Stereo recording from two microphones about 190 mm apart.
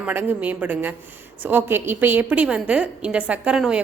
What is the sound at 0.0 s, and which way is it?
A woman's voice, 10° right (ahead or behind).